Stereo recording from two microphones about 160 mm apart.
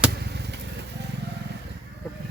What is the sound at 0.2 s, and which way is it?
Vehicle, 90° right.